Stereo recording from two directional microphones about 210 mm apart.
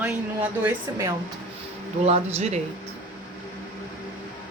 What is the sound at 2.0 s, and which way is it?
Speech, 30° right (ahead or behind).